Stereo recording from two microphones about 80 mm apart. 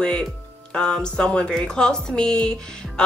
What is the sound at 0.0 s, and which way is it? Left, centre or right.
A woman's voice, centre.